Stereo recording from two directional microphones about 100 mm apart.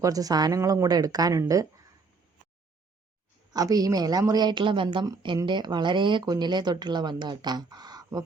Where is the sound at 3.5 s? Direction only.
40° right (ahead or behind).